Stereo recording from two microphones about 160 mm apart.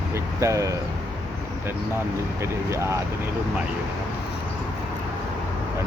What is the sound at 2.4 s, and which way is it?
Speech, 15° right (ahead or behind).